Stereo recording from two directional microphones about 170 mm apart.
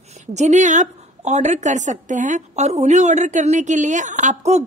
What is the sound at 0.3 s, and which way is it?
A woman's voice, 45° right (ahead or behind).